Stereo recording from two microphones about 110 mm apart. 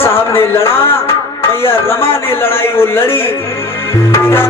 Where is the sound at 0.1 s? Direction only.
25° left (ahead or behind).